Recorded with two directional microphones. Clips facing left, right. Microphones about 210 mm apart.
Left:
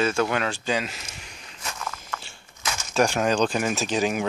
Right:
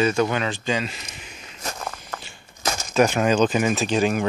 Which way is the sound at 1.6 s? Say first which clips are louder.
Right 3 dB; 40° right (ahead or behind).